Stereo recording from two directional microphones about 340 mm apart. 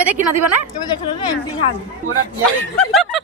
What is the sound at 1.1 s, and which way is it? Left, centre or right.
Speech, centre.